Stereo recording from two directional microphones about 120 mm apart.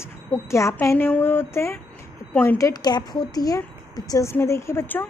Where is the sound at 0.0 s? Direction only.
20° left (ahead or behind).